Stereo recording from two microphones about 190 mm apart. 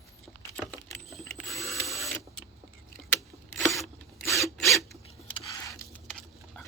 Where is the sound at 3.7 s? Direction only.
Centre (ahead or behind).